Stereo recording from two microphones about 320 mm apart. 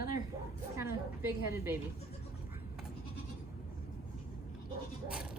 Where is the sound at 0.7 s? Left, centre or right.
Centre.